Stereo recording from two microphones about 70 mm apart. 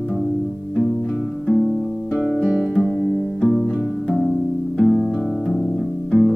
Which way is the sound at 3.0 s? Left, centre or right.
Centre.